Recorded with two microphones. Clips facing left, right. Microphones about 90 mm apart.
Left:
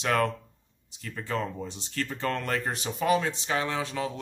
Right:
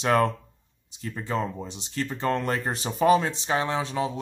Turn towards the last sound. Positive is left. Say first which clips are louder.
# right 3 dB
turn(degrees=-25)  # may be behind; listen again after turning